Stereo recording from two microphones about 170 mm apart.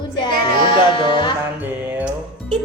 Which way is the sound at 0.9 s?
30° left (ahead or behind).